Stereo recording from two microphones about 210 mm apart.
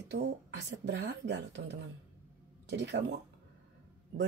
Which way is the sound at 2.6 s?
55° right (ahead or behind).